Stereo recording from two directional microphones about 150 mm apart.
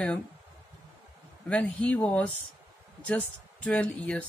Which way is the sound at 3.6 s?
10° left (ahead or behind).